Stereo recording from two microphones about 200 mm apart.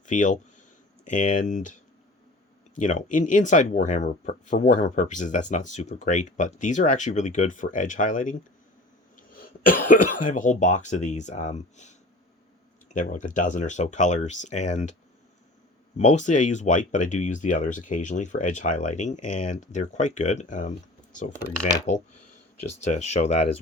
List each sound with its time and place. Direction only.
0.0 s speech: 40° left (ahead or behind)
16.0 s speech: 35° left (ahead or behind)
22.8 s speech: 35° left (ahead or behind)